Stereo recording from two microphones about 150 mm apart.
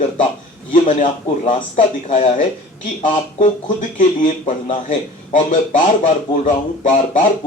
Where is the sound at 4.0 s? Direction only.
55° left (ahead or behind).